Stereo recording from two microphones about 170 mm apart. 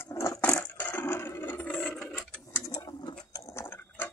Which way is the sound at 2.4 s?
20° left (ahead or behind).